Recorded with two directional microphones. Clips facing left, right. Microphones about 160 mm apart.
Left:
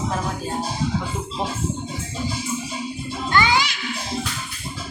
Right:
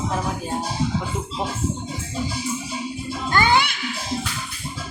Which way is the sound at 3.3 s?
50° right (ahead or behind).